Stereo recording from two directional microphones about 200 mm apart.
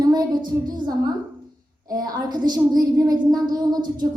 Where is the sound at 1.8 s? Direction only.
20° right (ahead or behind).